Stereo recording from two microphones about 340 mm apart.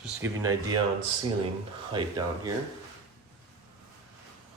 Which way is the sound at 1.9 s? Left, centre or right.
Centre.